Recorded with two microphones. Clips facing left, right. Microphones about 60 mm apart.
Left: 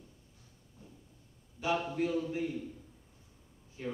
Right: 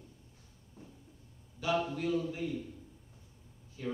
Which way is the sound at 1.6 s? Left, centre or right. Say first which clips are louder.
Left 1 dB; left.